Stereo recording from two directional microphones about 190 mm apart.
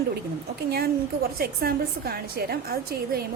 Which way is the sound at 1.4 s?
55° right (ahead or behind).